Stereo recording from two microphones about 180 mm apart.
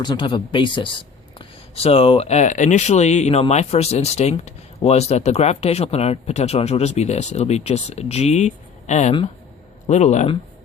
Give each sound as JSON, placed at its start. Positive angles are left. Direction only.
{"t": 0.0, "sound": "speech", "side_deg": 25}